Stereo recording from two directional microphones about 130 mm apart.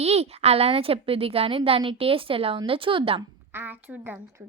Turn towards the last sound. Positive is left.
turn(degrees=-10)  # may be behind; listen again after turning